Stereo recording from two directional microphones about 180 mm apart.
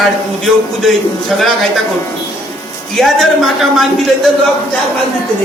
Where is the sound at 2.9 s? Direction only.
Centre (ahead or behind).